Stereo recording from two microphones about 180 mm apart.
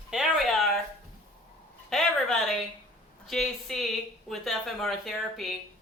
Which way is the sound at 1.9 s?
Centre (ahead or behind).